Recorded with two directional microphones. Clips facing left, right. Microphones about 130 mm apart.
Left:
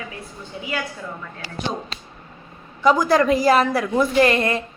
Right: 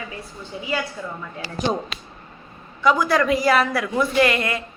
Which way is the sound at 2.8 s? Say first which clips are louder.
Left 2 dB; 40° left (ahead or behind).